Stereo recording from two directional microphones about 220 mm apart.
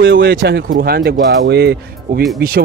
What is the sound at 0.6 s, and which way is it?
A man's voice, 40° right (ahead or behind).